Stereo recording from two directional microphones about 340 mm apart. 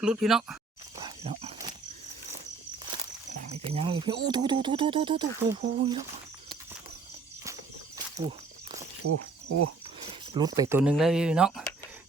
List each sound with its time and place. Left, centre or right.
0.0 s speech: centre
0.9 s wild animals: centre
3.5 s speech: centre
7.9 s a sound: centre
9.0 s cricket: right
10.1 s speech: centre